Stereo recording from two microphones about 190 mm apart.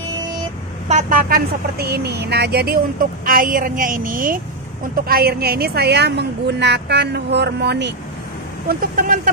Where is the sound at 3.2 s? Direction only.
45° right (ahead or behind).